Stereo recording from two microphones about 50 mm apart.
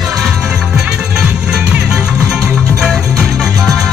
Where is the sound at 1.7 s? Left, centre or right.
Centre.